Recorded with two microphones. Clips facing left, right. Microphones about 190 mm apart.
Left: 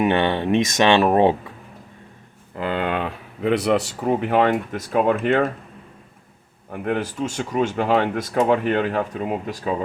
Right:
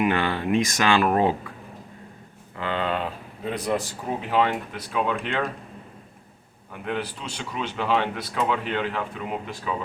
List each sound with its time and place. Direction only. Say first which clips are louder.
0.0 s speech: left 4 dB; 25° left (ahead or behind)
2.6 s speech: left 3 dB; 55° left (ahead or behind)
6.7 s speech: left 6 dB; 45° left (ahead or behind)